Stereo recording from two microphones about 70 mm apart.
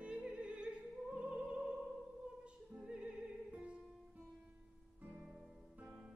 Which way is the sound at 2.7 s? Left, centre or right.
Centre.